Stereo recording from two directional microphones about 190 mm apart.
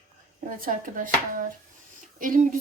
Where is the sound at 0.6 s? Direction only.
45° right (ahead or behind).